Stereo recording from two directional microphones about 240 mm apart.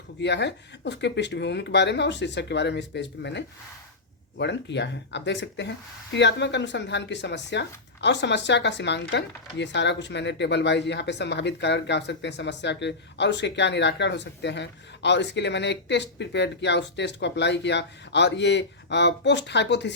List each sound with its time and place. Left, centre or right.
0.2 s speech: left